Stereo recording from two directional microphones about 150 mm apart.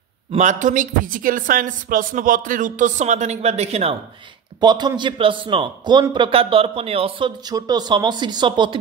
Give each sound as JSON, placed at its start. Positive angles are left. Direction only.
{"t": 0.3, "sound": "speech", "side_deg": -55}
{"t": 4.6, "sound": "a man's voice", "side_deg": -30}